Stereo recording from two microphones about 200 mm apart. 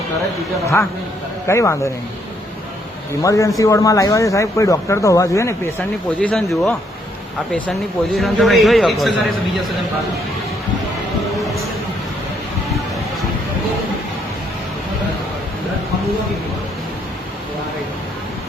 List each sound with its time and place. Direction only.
1.5 s speech: 15° left (ahead or behind)
3.1 s speech: 15° left (ahead or behind)
6.1 s a man's voice: 5° left (ahead or behind)